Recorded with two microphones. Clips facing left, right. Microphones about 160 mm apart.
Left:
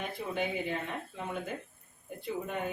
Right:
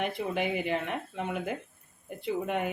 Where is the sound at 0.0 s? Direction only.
75° right (ahead or behind).